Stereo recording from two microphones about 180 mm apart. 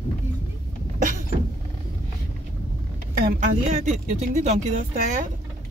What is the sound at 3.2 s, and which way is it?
Speech, 40° right (ahead or behind).